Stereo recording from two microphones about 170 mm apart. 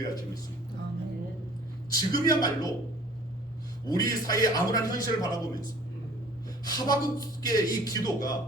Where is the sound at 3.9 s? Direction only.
20° left (ahead or behind).